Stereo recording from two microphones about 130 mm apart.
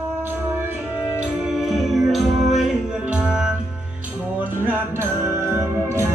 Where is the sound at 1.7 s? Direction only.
Centre (ahead or behind).